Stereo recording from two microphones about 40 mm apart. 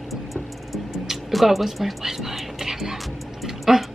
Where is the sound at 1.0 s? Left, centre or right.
Centre.